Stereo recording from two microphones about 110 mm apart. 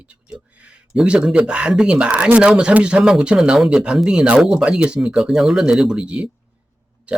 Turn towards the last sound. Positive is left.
turn(degrees=-10)  # may be behind; listen again after turning